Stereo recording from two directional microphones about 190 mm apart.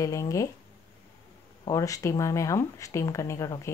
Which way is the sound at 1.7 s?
15° left (ahead or behind).